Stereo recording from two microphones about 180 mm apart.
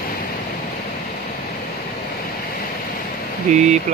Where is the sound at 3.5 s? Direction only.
40° right (ahead or behind).